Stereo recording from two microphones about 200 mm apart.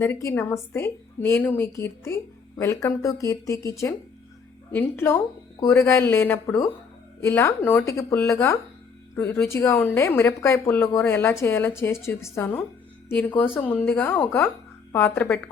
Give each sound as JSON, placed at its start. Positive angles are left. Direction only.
{"t": 0.0, "sound": "a woman's voice", "side_deg": 15}